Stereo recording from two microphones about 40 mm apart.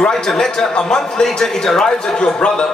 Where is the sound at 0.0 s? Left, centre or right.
Centre.